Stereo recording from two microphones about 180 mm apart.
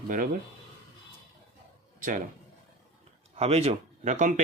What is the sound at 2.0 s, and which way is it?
Speech, 45° right (ahead or behind).